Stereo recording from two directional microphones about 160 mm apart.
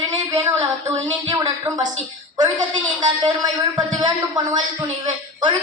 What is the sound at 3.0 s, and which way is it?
A man's voice, 30° right (ahead or behind).